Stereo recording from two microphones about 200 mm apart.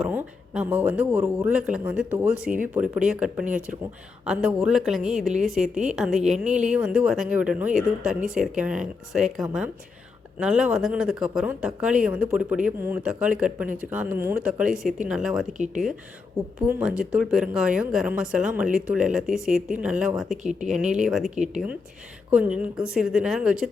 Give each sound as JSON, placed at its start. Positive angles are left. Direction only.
{"t": 0.0, "sound": "speech", "side_deg": -5}
{"t": 3.4, "sound": "speech", "side_deg": -40}
{"t": 4.3, "sound": "speech", "side_deg": -5}
{"t": 15.5, "sound": "speech", "side_deg": -35}
{"t": 16.6, "sound": "speech", "side_deg": -5}
{"t": 21.3, "sound": "speech", "side_deg": -35}
{"t": 22.3, "sound": "speech", "side_deg": -5}